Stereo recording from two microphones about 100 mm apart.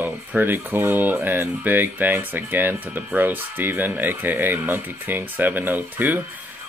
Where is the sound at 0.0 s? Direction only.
20° right (ahead or behind).